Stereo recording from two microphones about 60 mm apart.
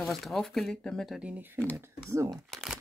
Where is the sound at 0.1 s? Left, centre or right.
Centre.